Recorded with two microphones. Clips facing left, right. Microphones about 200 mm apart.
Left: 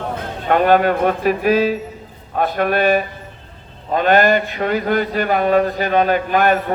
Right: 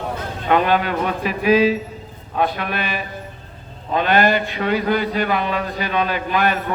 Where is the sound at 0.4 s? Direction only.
45° left (ahead or behind).